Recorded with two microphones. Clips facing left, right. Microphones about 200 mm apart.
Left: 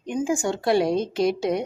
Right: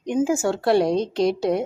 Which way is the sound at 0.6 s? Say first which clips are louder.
Right 2 dB; centre (ahead or behind).